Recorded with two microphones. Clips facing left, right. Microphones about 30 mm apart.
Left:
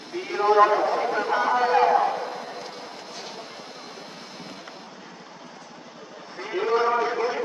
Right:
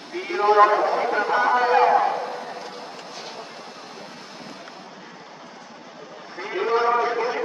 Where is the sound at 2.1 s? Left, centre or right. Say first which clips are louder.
Right 2 dB; right.